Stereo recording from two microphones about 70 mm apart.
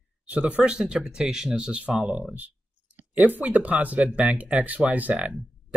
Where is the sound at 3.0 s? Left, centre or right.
Right.